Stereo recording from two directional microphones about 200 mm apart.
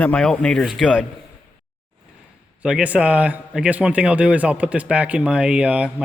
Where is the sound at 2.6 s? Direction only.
5° right (ahead or behind).